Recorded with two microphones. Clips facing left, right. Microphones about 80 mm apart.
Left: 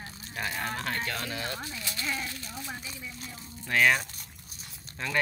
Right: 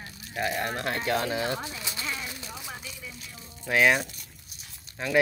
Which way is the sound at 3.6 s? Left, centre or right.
Centre.